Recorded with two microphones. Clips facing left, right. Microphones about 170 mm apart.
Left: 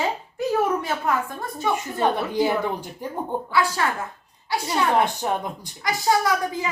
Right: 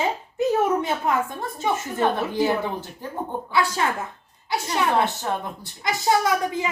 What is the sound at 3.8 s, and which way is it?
Speech, 20° right (ahead or behind).